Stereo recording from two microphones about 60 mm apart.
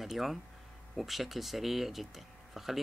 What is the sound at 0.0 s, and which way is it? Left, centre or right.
Speech, centre.